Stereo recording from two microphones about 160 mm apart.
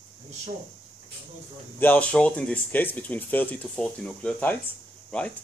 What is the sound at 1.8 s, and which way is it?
Speech, 10° left (ahead or behind).